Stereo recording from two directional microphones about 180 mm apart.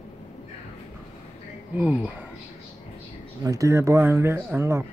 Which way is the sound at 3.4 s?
20° right (ahead or behind).